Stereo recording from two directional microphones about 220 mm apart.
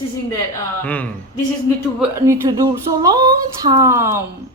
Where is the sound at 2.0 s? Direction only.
10° right (ahead or behind).